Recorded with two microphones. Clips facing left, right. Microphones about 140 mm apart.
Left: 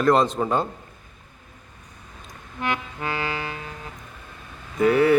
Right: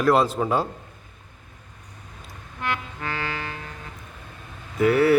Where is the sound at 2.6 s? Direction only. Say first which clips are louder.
Left 2 dB; 15° left (ahead or behind).